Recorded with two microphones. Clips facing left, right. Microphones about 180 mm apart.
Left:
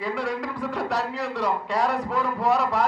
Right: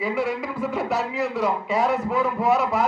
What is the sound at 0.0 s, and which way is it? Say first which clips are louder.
A man's voice: right 3 dB; 5° right (ahead or behind).